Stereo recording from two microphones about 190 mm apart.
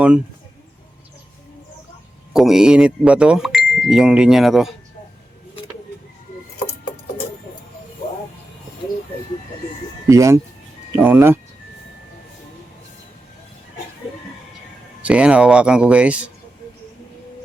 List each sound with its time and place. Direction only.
2.3 s speech: centre (ahead or behind)
10.1 s speech: 15° right (ahead or behind)
15.0 s speech: 5° right (ahead or behind)